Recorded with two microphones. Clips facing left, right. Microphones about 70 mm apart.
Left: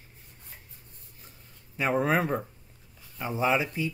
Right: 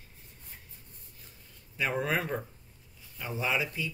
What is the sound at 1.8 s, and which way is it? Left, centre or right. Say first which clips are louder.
Speech: left 5 dB; left.